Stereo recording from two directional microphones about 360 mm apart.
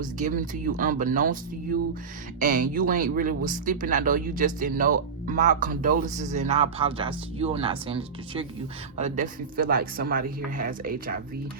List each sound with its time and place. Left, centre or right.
0.0 s a man's voice: right